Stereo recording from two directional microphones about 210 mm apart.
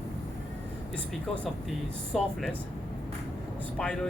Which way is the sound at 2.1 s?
Centre (ahead or behind).